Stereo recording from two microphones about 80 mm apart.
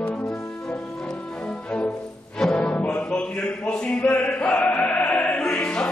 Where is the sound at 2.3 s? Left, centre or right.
Centre.